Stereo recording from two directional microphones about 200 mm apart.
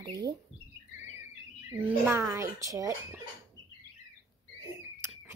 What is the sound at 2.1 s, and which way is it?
Speech, 15° right (ahead or behind).